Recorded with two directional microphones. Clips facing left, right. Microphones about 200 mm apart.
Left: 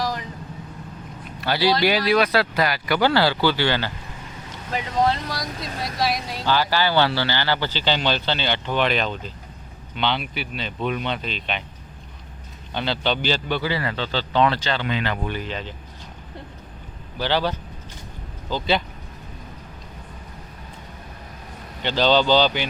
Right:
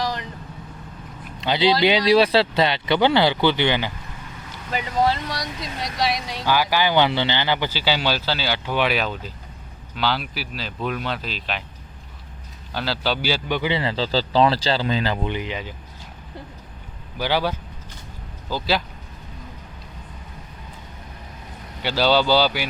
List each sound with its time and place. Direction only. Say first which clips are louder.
0.0 s vehicle: even; centre (ahead or behind)
1.4 s a man's voice: right 1 dB; 20° right (ahead or behind)
4.7 s speech: even; centre (ahead or behind)
6.4 s speech: right 1 dB; 10° right (ahead or behind)
12.7 s a man's voice: left 1 dB; 5° right (ahead or behind); by 15.3 s 30° right (ahead or behind)
15.3 s speech: right 1 dB; 15° right (ahead or behind)
17.2 s speech: even; 10° right (ahead or behind)
21.8 s speech: even; 5° right (ahead or behind)